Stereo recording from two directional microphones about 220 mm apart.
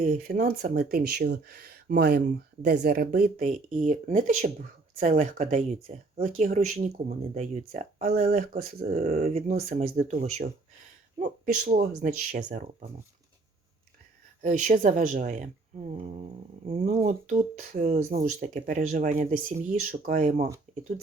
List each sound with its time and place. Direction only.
0.1 s speech: 40° right (ahead or behind)
14.4 s speech: 35° right (ahead or behind)
16.6 s speech: 30° right (ahead or behind)